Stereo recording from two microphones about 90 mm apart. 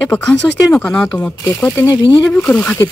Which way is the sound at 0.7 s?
10° left (ahead or behind).